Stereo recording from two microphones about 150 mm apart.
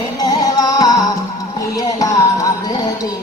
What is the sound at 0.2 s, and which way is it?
Music, 25° left (ahead or behind).